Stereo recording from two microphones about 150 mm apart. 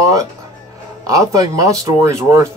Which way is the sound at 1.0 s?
20° right (ahead or behind).